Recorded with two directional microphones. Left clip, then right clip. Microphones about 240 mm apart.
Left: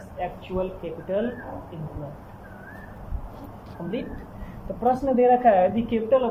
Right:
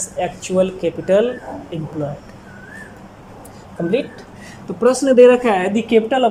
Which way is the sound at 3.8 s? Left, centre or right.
Right.